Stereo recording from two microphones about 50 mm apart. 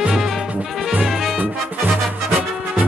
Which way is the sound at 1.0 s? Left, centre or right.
Centre.